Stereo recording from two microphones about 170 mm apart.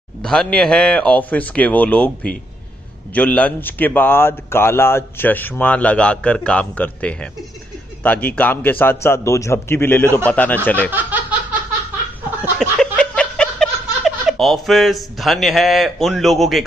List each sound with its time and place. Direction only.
0.2 s speech: 5° left (ahead or behind)
10.9 s laughter: 10° right (ahead or behind)
12.5 s a sound: 5° left (ahead or behind)